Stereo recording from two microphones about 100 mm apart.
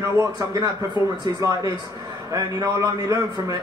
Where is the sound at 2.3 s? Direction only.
35° right (ahead or behind).